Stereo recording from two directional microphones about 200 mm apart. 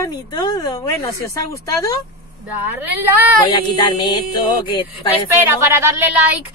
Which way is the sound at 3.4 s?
20° left (ahead or behind).